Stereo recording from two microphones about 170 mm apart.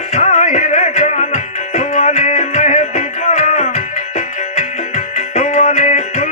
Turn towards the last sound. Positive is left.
turn(degrees=40)  # may be behind; listen again after turning